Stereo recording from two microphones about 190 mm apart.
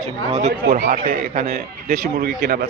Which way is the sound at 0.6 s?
50° right (ahead or behind).